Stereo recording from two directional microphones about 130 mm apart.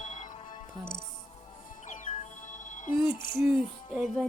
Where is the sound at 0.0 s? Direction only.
70° left (ahead or behind).